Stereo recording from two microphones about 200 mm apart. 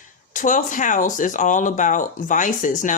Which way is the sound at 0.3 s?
40° left (ahead or behind).